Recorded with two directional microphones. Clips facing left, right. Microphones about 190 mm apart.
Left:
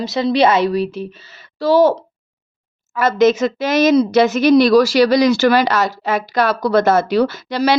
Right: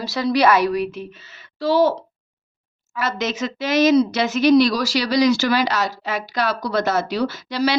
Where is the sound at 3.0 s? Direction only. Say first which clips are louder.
Left 10 dB; 50° left (ahead or behind).